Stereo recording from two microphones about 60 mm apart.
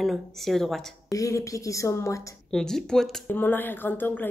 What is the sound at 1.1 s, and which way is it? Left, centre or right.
Speech, left.